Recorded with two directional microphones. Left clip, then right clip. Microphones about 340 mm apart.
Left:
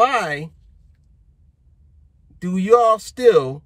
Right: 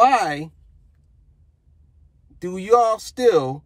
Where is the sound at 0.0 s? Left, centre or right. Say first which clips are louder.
Right 2 dB; centre.